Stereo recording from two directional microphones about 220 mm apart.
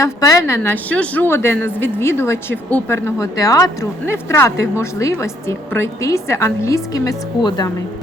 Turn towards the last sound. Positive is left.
turn(degrees=20)  # may be behind; listen again after turning